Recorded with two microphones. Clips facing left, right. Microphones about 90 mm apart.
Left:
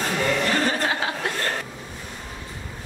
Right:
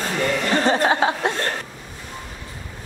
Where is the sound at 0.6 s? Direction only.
30° right (ahead or behind).